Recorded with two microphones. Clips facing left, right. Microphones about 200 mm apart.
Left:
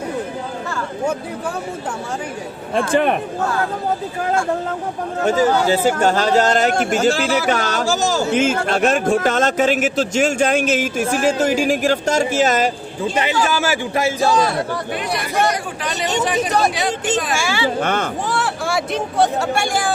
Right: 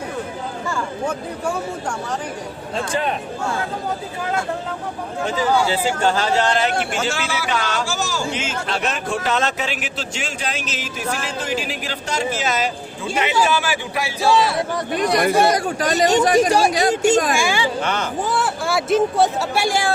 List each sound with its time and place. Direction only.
2.7 s speech: 55° left (ahead or behind)
5.2 s a man's voice: 45° left (ahead or behind)
15.5 s speech: 40° right (ahead or behind)
17.3 s speech: 15° right (ahead or behind)
17.7 s a man's voice: 55° left (ahead or behind)
18.3 s speech: centre (ahead or behind)